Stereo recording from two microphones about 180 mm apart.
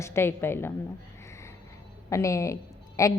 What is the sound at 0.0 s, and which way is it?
Speech, 15° left (ahead or behind).